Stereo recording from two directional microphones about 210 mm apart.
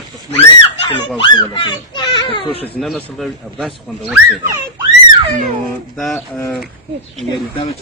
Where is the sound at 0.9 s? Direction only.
20° left (ahead or behind).